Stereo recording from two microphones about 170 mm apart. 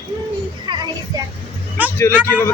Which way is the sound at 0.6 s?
25° right (ahead or behind).